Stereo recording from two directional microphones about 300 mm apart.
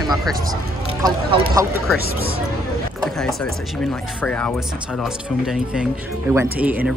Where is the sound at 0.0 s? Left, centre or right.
Centre.